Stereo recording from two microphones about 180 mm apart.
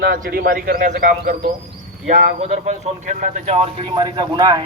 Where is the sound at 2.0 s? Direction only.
40° right (ahead or behind).